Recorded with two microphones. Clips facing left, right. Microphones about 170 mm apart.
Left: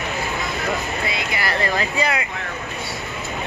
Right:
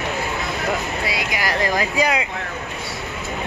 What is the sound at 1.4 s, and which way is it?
Speech, 90° right.